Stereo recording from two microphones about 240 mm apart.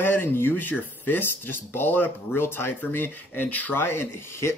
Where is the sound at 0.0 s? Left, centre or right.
Centre.